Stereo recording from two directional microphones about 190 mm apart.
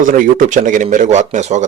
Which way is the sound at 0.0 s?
45° right (ahead or behind).